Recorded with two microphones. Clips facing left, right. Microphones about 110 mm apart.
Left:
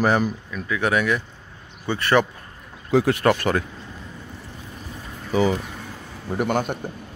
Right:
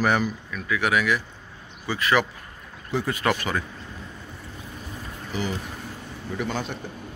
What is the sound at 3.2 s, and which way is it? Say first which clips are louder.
Speech: left 5 dB; 50° left (ahead or behind).